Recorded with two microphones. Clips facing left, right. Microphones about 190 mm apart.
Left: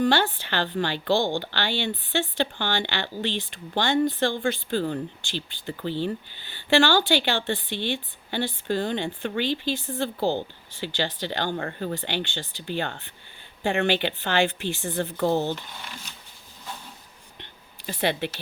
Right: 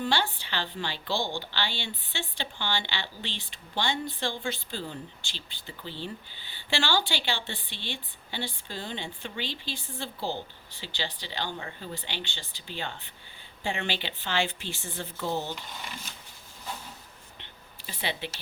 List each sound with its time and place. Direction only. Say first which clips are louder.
0.0 s speech: left 7 dB; 55° left (ahead or behind)
9.5 s speech: left 11 dB; 15° left (ahead or behind)
10.0 s speech: left 8 dB; 50° left (ahead or behind)
17.8 s speech: left 9 dB; 55° left (ahead or behind)